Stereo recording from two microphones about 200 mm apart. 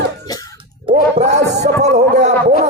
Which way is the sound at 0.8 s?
35° right (ahead or behind).